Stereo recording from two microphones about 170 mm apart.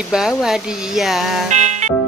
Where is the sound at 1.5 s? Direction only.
45° right (ahead or behind).